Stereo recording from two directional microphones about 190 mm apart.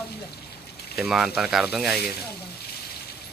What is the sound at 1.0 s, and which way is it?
Speech, centre (ahead or behind).